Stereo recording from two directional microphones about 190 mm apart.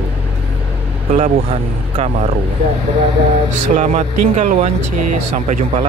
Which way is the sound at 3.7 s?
40° right (ahead or behind).